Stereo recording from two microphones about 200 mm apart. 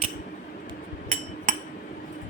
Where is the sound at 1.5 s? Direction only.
40° right (ahead or behind).